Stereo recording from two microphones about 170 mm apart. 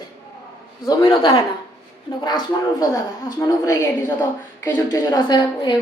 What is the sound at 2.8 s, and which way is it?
A woman's voice, 20° left (ahead or behind).